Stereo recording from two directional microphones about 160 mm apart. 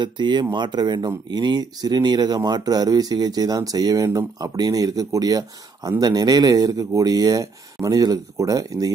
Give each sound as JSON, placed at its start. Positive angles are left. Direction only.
{"t": 0.0, "sound": "speech", "side_deg": -30}